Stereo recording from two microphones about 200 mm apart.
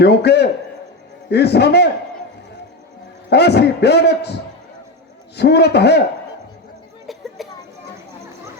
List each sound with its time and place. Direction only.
0.0 s a man's voice: 55° left (ahead or behind)
3.2 s a man's voice: 55° left (ahead or behind)
5.4 s a man's voice: 55° left (ahead or behind)
7.4 s children playing: centre (ahead or behind)